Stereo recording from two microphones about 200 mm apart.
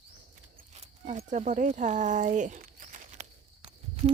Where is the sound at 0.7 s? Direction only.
35° right (ahead or behind).